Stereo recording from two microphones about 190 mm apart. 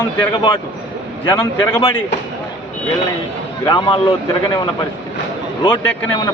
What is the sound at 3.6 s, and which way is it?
Speech, 25° left (ahead or behind).